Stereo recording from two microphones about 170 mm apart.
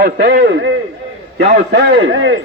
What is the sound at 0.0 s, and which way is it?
Speech, 65° right (ahead or behind).